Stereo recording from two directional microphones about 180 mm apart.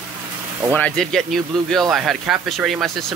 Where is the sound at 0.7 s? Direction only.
5° left (ahead or behind).